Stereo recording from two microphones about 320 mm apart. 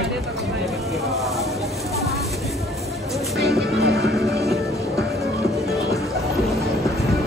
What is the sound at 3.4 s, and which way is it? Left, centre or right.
Music, centre.